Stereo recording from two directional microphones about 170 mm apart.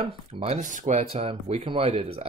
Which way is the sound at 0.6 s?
50° right (ahead or behind).